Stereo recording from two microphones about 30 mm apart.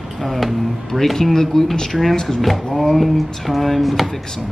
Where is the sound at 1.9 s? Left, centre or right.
Centre.